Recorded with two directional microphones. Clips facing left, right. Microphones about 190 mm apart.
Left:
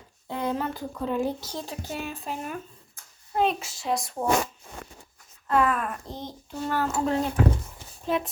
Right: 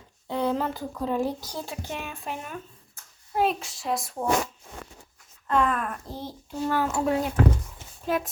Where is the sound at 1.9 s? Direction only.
35° left (ahead or behind).